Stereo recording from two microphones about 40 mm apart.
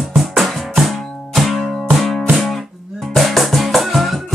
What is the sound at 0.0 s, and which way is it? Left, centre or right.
Music, centre.